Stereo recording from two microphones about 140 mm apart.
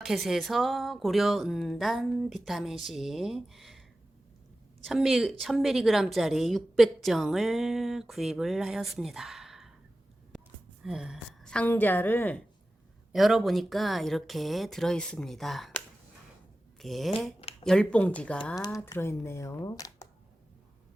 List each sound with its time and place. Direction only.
0.0 s a woman's voice: centre (ahead or behind)
4.9 s a woman's voice: centre (ahead or behind)
10.8 s a woman's voice: 5° right (ahead or behind)
11.4 s a woman's voice: 10° left (ahead or behind)
13.1 s a woman's voice: centre (ahead or behind)
18.6 s speech: 20° left (ahead or behind)